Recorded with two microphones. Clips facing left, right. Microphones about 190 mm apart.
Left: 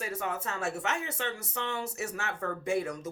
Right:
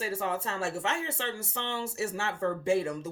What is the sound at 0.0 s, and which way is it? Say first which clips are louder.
Speech: right 3 dB; 30° right (ahead or behind).